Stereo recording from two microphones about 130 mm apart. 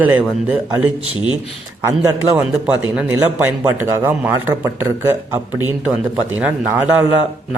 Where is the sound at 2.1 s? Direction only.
20° right (ahead or behind).